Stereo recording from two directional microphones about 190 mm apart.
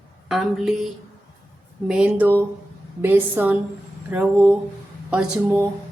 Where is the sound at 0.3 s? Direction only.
Centre (ahead or behind).